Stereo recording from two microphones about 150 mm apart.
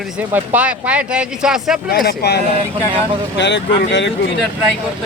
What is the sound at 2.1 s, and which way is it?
Speech, 90° left.